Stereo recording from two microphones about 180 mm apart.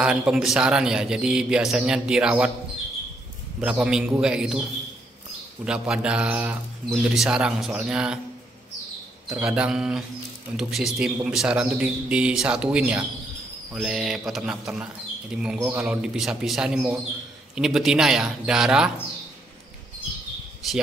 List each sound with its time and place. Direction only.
0.0 s a man's voice: 5° right (ahead or behind)
3.6 s a man's voice: 5° right (ahead or behind)
5.7 s a man's voice: 5° right (ahead or behind)
9.3 s a man's voice: 5° right (ahead or behind)
20.6 s a man's voice: centre (ahead or behind)